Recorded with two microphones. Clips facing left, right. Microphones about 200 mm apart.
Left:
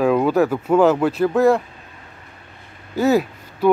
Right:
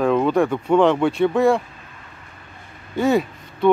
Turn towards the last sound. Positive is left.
turn(degrees=5)  # may be behind; listen again after turning